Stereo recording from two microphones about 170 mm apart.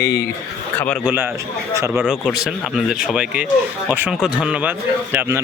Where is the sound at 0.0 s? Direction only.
75° left (ahead or behind).